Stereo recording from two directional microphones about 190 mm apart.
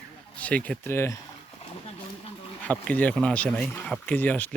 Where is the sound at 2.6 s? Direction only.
10° left (ahead or behind).